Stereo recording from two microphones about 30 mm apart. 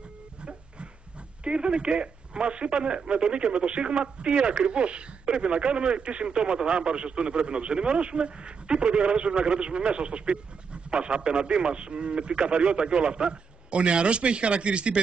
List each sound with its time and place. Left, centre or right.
1.4 s speech: right